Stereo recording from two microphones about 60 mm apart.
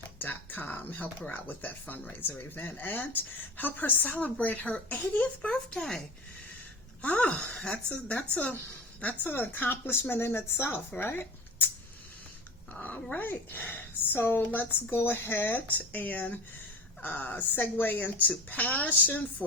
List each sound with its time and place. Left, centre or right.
0.2 s speech: left
5.5 s speech: centre
7.0 s speech: left
12.7 s speech: left